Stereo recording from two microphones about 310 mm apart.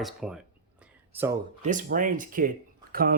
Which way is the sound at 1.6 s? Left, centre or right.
Right.